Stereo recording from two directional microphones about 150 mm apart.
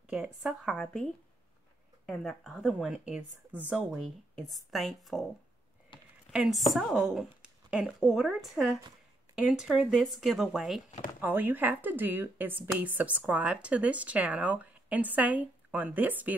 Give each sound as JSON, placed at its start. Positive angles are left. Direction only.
{"t": 0.1, "sound": "a woman's voice", "side_deg": -5}
{"t": 0.7, "sound": "a woman's voice", "side_deg": 5}
{"t": 5.9, "sound": "a sound", "side_deg": 30}
{"t": 6.3, "sound": "a woman's voice", "side_deg": 0}
{"t": 11.1, "sound": "a woman's voice", "side_deg": -15}